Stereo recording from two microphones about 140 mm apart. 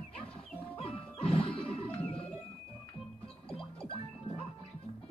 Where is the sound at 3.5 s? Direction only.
40° left (ahead or behind).